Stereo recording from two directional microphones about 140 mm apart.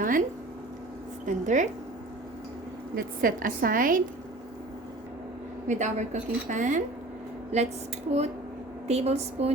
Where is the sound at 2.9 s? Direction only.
90° right.